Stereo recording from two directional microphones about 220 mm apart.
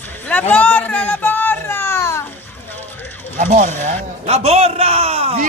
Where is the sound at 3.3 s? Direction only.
35° right (ahead or behind).